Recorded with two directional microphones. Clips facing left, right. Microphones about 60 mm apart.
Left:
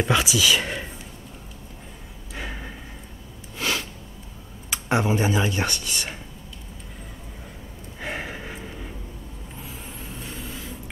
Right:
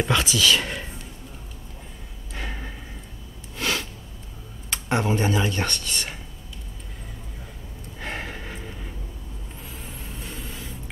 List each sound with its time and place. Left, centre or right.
0.0 s speech: centre
2.3 s a sound: centre
4.6 s speech: centre
8.0 s gasp: centre
9.6 s vehicle: centre